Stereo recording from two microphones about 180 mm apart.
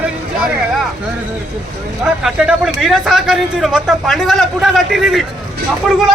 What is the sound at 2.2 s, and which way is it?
Speech, centre (ahead or behind).